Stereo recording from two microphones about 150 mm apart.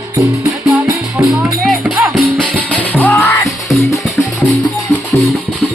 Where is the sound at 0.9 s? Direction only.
20° right (ahead or behind).